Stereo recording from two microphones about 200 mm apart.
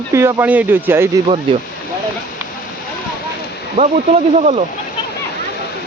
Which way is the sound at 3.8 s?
40° right (ahead or behind).